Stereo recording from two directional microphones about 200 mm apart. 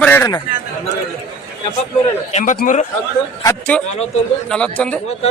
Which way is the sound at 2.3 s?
40° left (ahead or behind).